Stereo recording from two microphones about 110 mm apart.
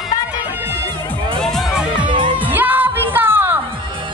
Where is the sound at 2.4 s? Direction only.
15° right (ahead or behind).